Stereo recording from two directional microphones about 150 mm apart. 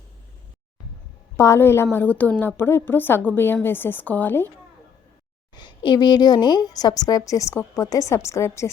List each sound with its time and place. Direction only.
1.4 s a woman's voice: 20° left (ahead or behind)
5.5 s a woman's voice: 30° left (ahead or behind)